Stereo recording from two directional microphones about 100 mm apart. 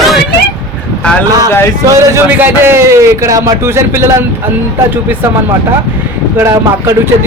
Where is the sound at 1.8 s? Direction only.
30° right (ahead or behind).